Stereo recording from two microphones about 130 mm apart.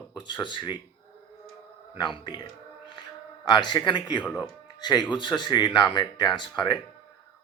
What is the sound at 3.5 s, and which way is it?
Speech, 35° left (ahead or behind).